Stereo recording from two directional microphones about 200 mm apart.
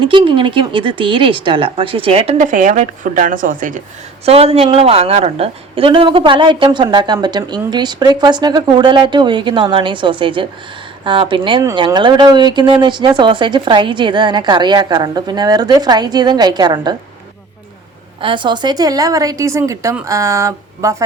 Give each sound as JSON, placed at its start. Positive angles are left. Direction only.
{"t": 0.0, "sound": "a woman's voice", "side_deg": -25}
{"t": 4.3, "sound": "a woman's voice", "side_deg": -30}
{"t": 18.2, "sound": "a woman's voice", "side_deg": -25}